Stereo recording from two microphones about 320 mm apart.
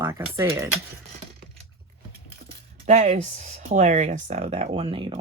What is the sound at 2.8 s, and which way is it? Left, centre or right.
Speech, right.